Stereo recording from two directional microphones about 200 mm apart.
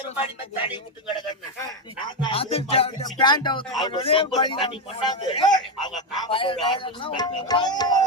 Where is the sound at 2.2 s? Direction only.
30° left (ahead or behind).